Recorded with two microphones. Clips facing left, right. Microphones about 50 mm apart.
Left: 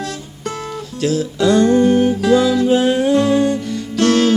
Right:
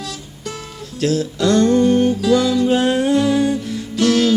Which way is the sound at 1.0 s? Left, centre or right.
Centre.